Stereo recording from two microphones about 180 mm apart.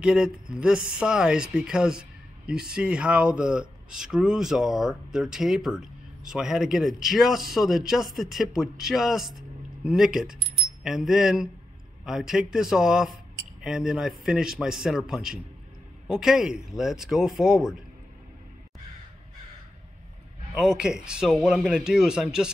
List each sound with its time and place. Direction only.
0.0 s speech: 5° right (ahead or behind)
20.5 s speech: 5° right (ahead or behind)